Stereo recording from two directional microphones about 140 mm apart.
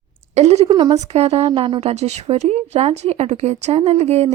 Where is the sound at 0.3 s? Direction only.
50° right (ahead or behind).